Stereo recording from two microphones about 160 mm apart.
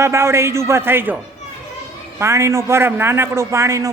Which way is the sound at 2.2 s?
20° right (ahead or behind).